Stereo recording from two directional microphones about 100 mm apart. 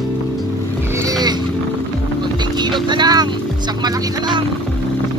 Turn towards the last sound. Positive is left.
turn(degrees=-50)  # may be behind; listen again after turning